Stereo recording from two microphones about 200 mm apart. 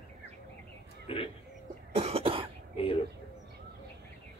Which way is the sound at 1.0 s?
30° left (ahead or behind).